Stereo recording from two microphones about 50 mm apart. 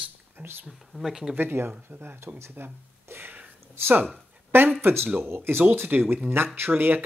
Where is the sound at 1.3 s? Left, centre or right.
Right.